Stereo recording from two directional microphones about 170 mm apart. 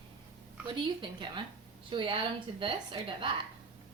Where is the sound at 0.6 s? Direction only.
30° right (ahead or behind).